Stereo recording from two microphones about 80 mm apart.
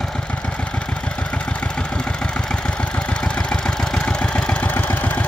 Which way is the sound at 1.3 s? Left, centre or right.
Centre.